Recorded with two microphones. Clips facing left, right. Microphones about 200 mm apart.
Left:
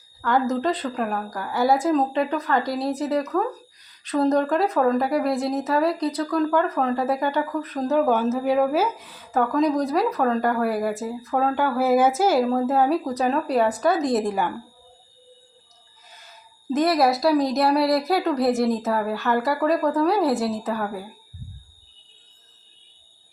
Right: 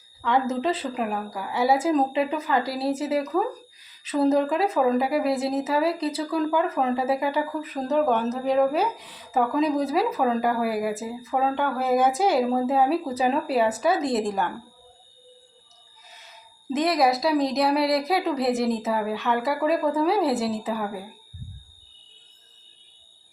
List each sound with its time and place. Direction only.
0.2 s speech: centre (ahead or behind)
16.7 s speech: centre (ahead or behind)